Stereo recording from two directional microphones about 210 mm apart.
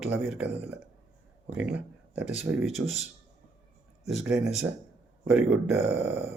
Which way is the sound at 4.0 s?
30° left (ahead or behind).